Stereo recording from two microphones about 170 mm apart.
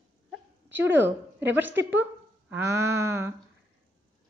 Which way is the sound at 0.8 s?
10° right (ahead or behind).